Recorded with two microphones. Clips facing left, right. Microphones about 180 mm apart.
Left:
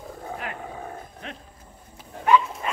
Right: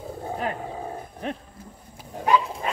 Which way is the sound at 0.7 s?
25° right (ahead or behind).